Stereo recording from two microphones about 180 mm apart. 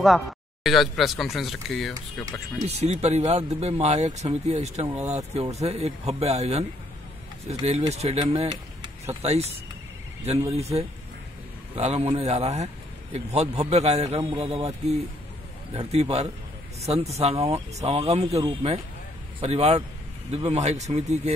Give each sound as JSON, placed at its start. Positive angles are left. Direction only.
{"t": 0.0, "sound": "speech", "side_deg": 0}
{"t": 2.6, "sound": "speech", "side_deg": -35}
{"t": 7.9, "sound": "speech", "side_deg": -35}